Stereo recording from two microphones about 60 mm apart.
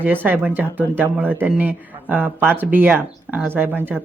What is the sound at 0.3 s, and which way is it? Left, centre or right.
Speech, right.